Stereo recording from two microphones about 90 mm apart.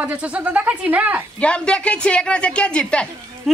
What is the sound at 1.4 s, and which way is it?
A woman's voice, 10° left (ahead or behind).